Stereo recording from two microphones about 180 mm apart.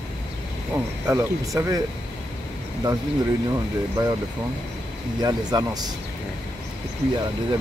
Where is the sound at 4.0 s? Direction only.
20° right (ahead or behind).